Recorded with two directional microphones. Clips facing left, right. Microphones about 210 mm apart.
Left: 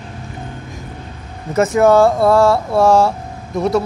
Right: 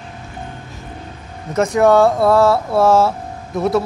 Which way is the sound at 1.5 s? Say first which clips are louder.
Left 1 dB; 5° left (ahead or behind).